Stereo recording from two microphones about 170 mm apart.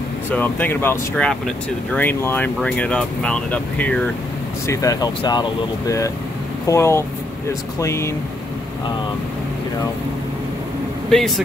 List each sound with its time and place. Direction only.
0.3 s speech: 10° left (ahead or behind)
4.6 s speech: 20° left (ahead or behind)
11.1 s speech: centre (ahead or behind)